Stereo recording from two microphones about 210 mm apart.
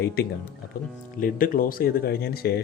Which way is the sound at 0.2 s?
50° left (ahead or behind).